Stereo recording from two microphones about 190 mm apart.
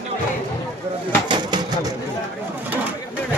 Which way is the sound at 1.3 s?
25° right (ahead or behind).